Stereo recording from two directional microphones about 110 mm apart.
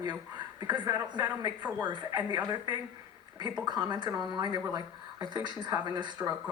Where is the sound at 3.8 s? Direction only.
45° right (ahead or behind).